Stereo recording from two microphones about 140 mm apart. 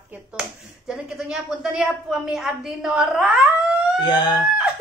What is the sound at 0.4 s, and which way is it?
Speech, 5° right (ahead or behind).